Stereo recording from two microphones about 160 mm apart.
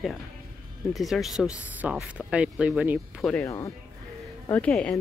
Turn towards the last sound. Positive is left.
turn(degrees=5)  # may be behind; listen again after turning